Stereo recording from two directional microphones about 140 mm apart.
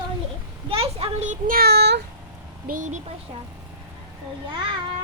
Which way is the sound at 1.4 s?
90° right.